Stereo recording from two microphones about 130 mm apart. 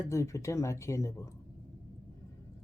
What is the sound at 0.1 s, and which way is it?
Speech, 25° left (ahead or behind).